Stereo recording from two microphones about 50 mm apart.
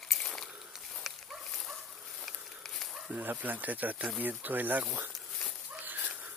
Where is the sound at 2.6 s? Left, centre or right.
Centre.